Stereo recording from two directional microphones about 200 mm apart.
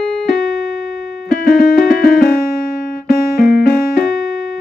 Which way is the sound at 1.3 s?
50° left (ahead or behind).